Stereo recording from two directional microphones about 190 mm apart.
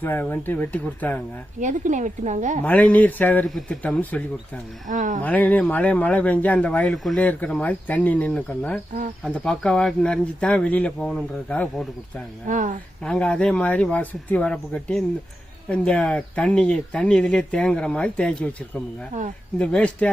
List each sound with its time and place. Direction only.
0.0 s speech: 10° left (ahead or behind)
1.6 s a woman's voice: 40° right (ahead or behind)
2.6 s speech: 10° left (ahead or behind)
4.9 s speech: 40° right (ahead or behind)
5.2 s speech: 10° left (ahead or behind)
12.5 s speech: 40° right (ahead or behind)
13.0 s speech: 5° left (ahead or behind)